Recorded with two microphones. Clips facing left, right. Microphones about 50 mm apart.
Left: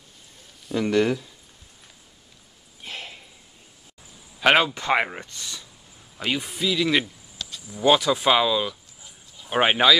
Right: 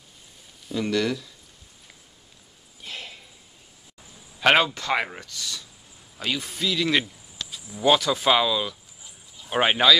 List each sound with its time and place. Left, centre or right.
0.7 s speech: left
2.8 s a sound: centre
4.4 s speech: centre
4.7 s speech: left